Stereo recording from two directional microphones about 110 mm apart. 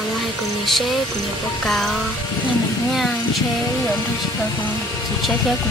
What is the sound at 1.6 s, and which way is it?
Speech, 5° left (ahead or behind).